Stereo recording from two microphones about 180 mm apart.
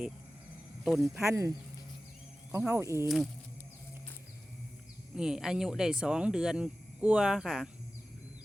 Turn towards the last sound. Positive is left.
turn(degrees=-5)  # may be behind; listen again after turning